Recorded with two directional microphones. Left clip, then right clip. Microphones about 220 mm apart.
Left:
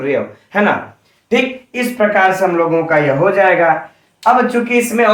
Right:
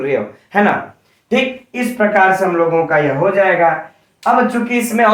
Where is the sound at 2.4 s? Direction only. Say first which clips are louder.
Even; centre (ahead or behind).